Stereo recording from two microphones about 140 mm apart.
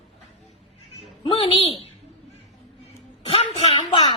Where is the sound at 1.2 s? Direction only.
40° left (ahead or behind).